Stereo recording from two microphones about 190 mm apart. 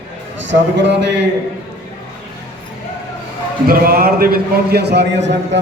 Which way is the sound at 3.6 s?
50° right (ahead or behind).